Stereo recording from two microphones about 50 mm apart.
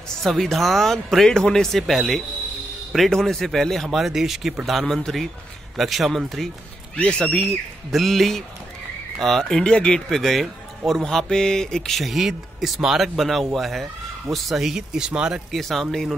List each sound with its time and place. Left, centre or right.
0.2 s speech: centre
7.0 s speech: centre
7.4 s speech: centre
10.0 s speech: centre
15.5 s speech: centre